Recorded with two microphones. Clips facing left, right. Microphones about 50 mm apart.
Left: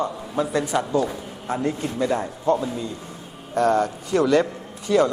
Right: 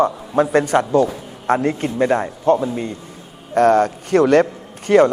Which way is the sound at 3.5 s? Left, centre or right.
Right.